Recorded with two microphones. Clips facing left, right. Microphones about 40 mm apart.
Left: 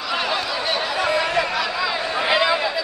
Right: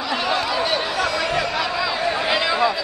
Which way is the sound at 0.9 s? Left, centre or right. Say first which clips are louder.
Left 1 dB; centre.